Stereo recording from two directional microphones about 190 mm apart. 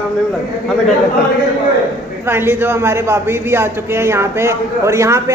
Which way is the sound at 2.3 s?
10° right (ahead or behind).